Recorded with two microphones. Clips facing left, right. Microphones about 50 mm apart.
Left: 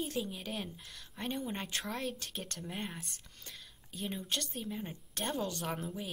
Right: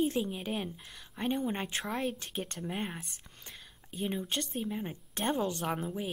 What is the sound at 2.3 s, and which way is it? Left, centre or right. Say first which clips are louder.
A woman's voice: right 5 dB; centre.